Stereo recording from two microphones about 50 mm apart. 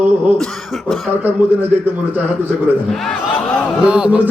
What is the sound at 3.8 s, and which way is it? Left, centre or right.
Chant, right.